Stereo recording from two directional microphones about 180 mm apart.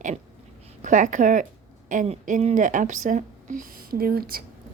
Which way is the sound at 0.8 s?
45° right (ahead or behind).